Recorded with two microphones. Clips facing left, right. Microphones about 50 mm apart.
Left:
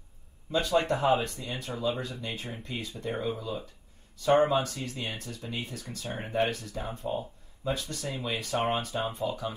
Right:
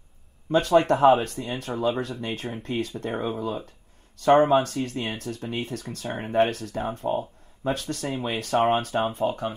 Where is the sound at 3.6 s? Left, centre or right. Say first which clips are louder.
Right 2 dB; right.